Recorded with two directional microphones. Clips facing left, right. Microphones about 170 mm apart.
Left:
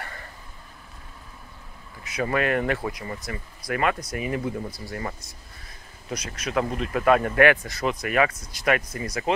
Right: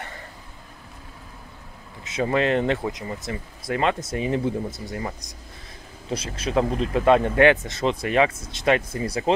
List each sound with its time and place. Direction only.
2.0 s speech: 25° right (ahead or behind)
6.0 s speech: 30° right (ahead or behind)